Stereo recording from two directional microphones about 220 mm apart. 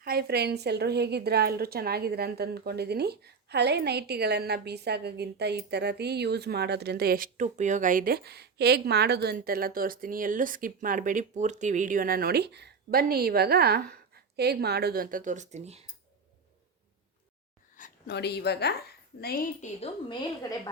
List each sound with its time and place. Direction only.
0.0 s a woman's voice: 45° right (ahead or behind)
17.7 s a woman's voice: 40° left (ahead or behind)
19.8 s a woman's voice: 20° left (ahead or behind)